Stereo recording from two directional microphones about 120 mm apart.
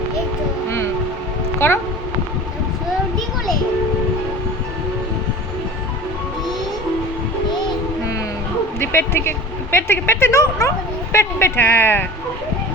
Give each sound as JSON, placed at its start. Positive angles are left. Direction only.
{"t": 1.5, "sound": "speech", "side_deg": 20}
{"t": 8.8, "sound": "speech", "side_deg": 20}